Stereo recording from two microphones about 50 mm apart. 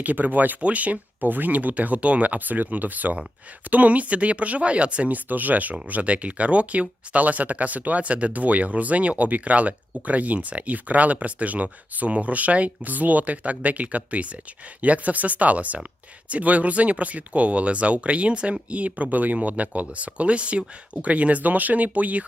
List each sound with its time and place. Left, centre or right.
0.0 s speech: right